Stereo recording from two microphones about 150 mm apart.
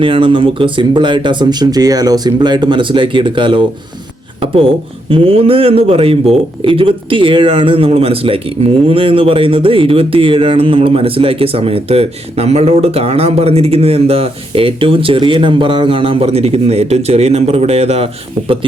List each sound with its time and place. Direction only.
0.0 s speech: 35° right (ahead or behind)